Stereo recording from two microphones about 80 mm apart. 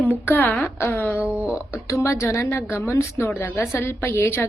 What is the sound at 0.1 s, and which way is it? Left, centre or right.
Speech, left.